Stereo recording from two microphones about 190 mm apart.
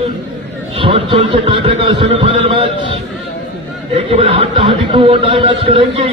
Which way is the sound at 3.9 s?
30° right (ahead or behind).